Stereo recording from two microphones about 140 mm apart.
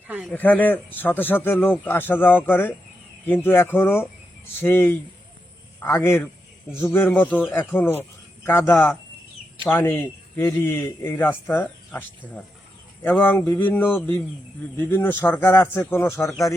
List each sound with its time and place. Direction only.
0.3 s a man's voice: 10° left (ahead or behind)